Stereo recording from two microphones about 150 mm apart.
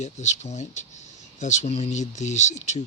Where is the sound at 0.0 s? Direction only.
50° left (ahead or behind).